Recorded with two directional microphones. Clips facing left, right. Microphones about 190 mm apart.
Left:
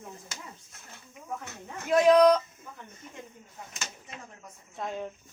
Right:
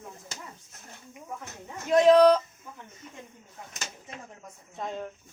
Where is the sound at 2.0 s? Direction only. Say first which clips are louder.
Right 1 dB; 30° right (ahead or behind).